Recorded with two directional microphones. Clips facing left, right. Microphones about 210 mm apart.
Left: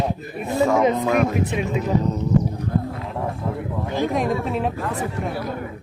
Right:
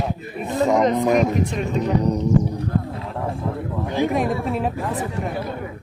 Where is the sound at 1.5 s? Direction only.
5° left (ahead or behind).